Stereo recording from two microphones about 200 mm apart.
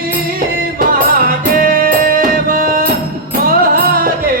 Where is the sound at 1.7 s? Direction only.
45° right (ahead or behind).